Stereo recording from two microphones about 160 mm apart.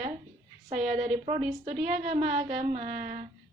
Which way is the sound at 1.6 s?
45° right (ahead or behind).